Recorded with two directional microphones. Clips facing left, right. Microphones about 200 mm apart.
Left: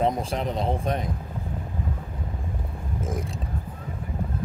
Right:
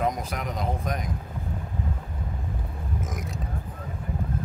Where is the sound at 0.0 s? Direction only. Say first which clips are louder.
Left 3 dB; 30° left (ahead or behind).